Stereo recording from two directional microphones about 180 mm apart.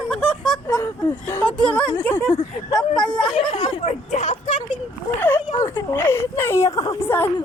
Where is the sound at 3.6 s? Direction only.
40° left (ahead or behind).